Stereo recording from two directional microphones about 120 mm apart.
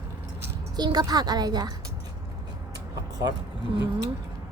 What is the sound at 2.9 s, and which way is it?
Vehicle, 35° right (ahead or behind).